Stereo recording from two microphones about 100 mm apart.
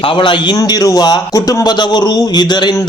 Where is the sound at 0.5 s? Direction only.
35° left (ahead or behind).